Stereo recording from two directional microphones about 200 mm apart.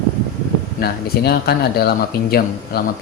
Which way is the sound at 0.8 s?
50° left (ahead or behind).